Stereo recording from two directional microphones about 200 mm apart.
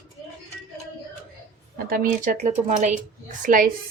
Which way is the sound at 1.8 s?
45° right (ahead or behind).